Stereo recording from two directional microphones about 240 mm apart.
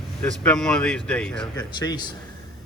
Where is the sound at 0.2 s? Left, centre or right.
Centre.